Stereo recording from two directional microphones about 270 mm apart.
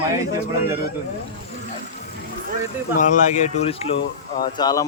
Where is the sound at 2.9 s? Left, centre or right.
Left.